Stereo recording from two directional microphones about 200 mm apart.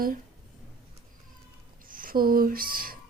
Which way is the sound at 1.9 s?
45° right (ahead or behind).